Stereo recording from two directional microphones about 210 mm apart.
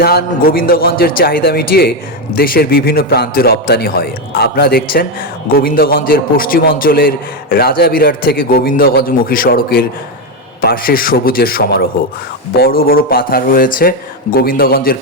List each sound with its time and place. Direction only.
0.0 s a man's voice: 50° left (ahead or behind)